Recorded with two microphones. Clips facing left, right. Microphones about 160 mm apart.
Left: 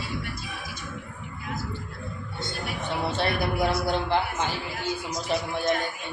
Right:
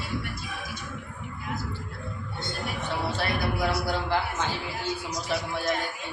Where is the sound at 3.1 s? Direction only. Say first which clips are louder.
Left 3 dB; 25° left (ahead or behind).